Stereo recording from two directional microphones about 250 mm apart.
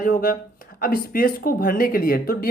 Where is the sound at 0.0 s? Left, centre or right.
Left.